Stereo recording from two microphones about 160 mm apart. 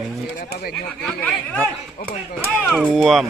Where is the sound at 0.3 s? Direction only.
70° left (ahead or behind).